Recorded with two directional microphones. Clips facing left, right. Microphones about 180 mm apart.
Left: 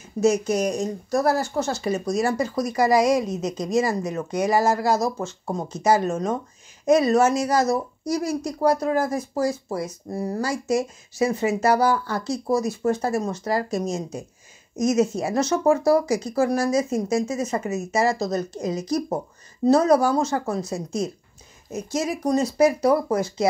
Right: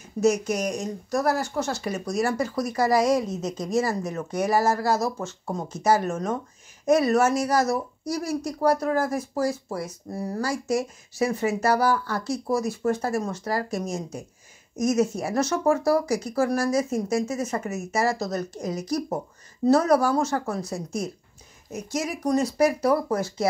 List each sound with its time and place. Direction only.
0.2 s speech: 25° left (ahead or behind)